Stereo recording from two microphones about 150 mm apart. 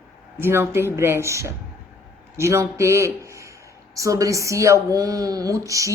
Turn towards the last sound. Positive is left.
turn(degrees=-20)  # may be behind; listen again after turning